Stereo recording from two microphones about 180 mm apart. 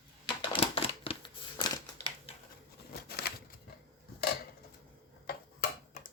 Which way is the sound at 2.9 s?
60° left (ahead or behind).